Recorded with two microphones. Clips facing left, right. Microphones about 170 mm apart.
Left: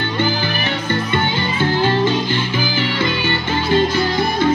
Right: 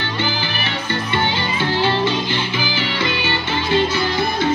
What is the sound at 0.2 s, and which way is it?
Music, 45° left (ahead or behind).